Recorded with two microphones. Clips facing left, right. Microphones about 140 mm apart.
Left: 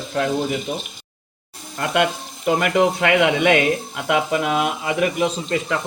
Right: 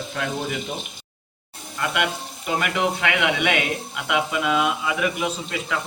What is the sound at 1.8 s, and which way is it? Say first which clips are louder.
Speech: left 5 dB; 35° left (ahead or behind).